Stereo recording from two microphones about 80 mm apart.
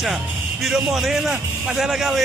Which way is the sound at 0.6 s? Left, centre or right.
Centre.